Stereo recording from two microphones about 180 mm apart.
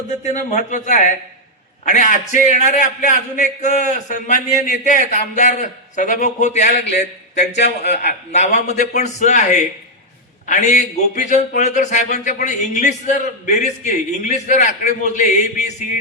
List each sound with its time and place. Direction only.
0.3 s a man's voice: 45° left (ahead or behind)